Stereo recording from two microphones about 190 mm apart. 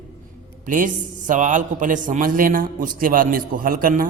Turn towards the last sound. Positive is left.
turn(degrees=-45)  # may be behind; listen again after turning